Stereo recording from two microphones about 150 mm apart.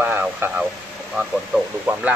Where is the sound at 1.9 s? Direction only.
10° right (ahead or behind).